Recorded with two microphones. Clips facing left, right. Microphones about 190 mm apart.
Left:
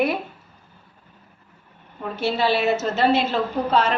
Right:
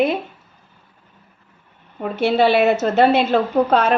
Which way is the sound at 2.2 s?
60° right (ahead or behind).